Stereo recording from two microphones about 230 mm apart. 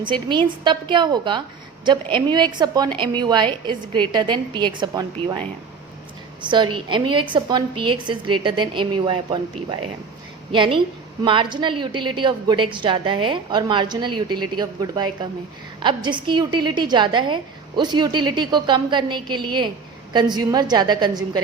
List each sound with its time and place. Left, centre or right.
0.0 s a woman's voice: centre
6.4 s a woman's voice: right